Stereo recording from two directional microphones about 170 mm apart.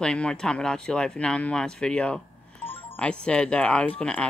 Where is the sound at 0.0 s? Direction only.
5° left (ahead or behind).